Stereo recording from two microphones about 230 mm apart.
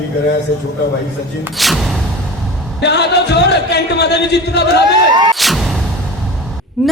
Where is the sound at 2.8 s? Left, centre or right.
Left.